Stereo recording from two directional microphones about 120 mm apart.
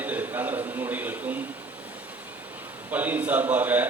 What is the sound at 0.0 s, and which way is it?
A man's voice, 15° right (ahead or behind).